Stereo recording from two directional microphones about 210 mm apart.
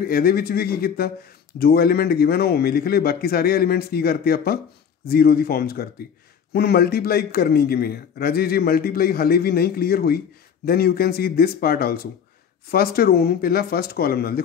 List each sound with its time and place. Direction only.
0.0 s a man's voice: 45° left (ahead or behind)